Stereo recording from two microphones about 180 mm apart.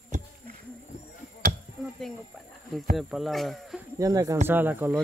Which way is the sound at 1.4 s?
50° right (ahead or behind).